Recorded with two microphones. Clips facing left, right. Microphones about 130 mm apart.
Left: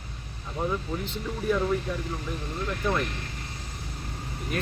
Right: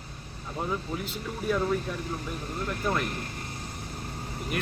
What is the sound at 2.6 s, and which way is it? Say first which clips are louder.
Speech: left 1 dB; 40° right (ahead or behind).